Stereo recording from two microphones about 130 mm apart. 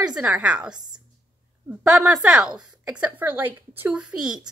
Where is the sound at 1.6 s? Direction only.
10° right (ahead or behind).